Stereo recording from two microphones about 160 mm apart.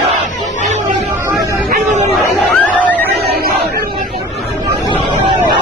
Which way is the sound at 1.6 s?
55° right (ahead or behind).